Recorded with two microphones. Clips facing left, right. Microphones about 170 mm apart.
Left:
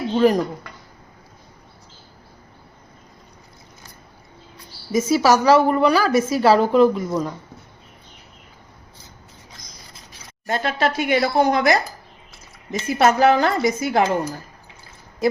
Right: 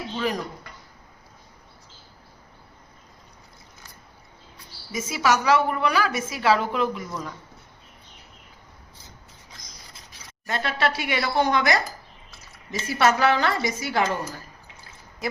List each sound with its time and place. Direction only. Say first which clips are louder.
0.1 s speech: left 12 dB; 45° left (ahead or behind)
4.9 s a woman's voice: left 7 dB; 40° left (ahead or behind)
10.4 s speech: left 4 dB; 45° left (ahead or behind)
12.9 s speech: left 5 dB; 45° left (ahead or behind)